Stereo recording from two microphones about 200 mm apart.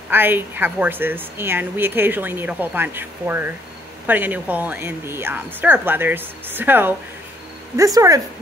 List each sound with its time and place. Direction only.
0.1 s a woman's voice: 10° right (ahead or behind)